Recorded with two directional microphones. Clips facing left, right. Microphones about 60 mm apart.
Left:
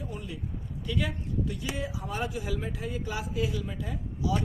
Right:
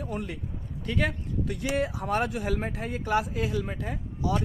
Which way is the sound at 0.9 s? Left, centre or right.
Right.